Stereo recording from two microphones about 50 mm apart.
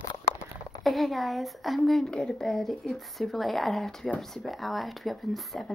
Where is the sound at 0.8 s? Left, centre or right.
Centre.